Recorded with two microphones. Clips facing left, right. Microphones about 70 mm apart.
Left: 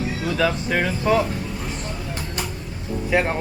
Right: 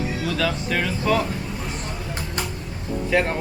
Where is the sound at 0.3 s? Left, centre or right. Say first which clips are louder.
Left 4 dB; centre.